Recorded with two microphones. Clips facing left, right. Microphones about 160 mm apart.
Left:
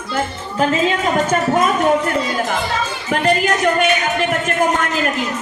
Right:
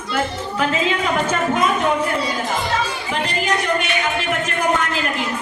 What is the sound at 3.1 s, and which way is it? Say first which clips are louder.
Speech: left 6 dB; 50° left (ahead or behind).